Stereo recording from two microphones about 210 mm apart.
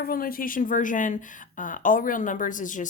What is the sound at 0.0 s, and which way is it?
A woman's voice, 45° left (ahead or behind).